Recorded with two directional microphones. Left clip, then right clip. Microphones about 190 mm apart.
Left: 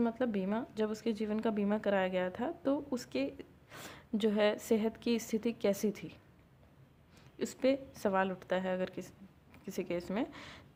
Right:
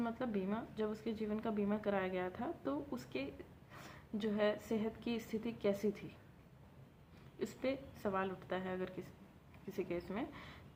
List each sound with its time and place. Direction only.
0.0 s speech: 45° left (ahead or behind)
7.3 s a woman's voice: 50° left (ahead or behind)